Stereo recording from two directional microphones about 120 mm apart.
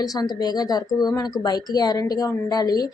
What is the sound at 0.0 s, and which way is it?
A woman's voice, 30° left (ahead or behind).